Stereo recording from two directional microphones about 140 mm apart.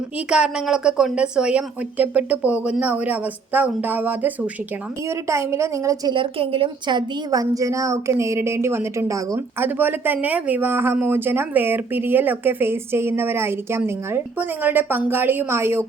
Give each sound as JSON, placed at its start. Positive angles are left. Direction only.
{"t": 0.3, "sound": "a woman's voice", "side_deg": -5}
{"t": 6.1, "sound": "a woman's voice", "side_deg": -40}